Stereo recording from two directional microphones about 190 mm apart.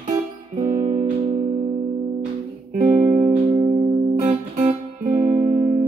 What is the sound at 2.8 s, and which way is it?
Music, 10° right (ahead or behind).